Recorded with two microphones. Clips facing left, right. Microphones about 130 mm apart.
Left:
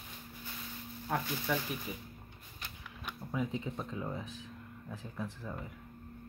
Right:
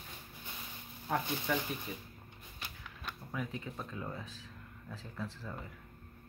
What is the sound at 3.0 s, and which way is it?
Speech, 20° left (ahead or behind).